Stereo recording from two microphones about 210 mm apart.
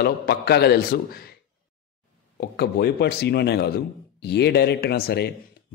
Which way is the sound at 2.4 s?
50° left (ahead or behind).